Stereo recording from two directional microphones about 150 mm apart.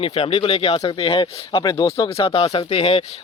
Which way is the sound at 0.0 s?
40° left (ahead or behind).